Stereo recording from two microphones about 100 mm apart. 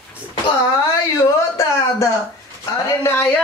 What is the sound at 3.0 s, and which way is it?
Speech, 25° left (ahead or behind).